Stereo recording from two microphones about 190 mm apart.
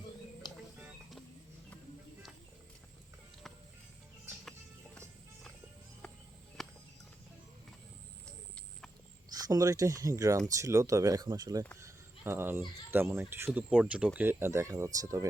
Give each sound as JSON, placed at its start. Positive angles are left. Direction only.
{"t": 0.4, "sound": "music", "side_deg": 20}
{"t": 6.6, "sound": "a sound", "side_deg": 0}
{"t": 9.3, "sound": "speech", "side_deg": -20}